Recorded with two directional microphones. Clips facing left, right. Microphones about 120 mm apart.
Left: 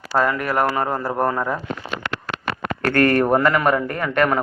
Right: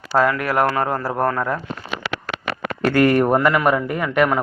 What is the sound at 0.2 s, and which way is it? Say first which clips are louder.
Speech: right 2 dB; centre (ahead or behind).